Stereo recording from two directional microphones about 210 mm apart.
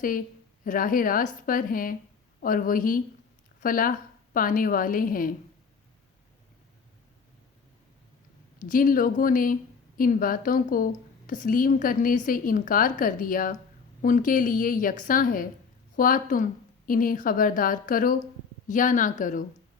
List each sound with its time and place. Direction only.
0.6 s a woman's voice: 40° left (ahead or behind)
8.6 s a woman's voice: 40° left (ahead or behind)